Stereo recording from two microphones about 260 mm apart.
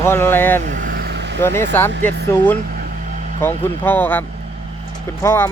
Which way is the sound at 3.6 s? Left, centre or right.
Centre.